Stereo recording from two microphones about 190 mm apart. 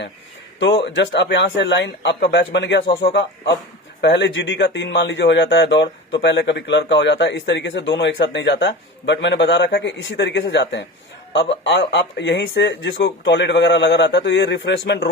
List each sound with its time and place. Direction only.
0.9 s speech: 70° left (ahead or behind)